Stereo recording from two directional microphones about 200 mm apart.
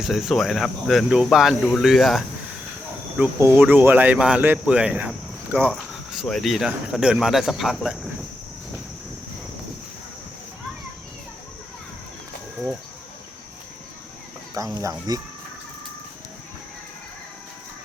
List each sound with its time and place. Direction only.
0.0 s speech: centre (ahead or behind)
3.2 s speech: 10° right (ahead or behind)
14.8 s speech: 15° right (ahead or behind)